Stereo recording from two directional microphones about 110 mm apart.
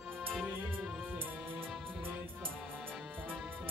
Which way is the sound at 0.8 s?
Centre (ahead or behind).